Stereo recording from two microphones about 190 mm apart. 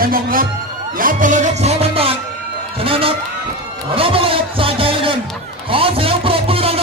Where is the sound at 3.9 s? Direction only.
30° right (ahead or behind).